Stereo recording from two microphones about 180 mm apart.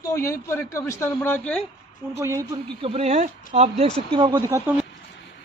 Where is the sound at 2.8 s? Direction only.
35° right (ahead or behind).